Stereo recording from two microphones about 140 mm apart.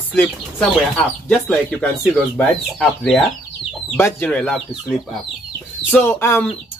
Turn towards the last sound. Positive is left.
turn(degrees=15)  # may be behind; listen again after turning